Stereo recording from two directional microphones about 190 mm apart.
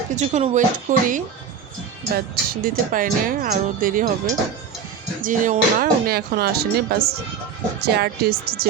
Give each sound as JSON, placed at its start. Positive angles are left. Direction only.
{"t": 0.2, "sound": "speech", "side_deg": -40}
{"t": 5.2, "sound": "speech", "side_deg": -45}